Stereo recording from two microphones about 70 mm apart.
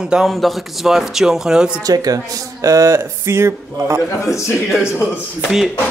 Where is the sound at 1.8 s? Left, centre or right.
Right.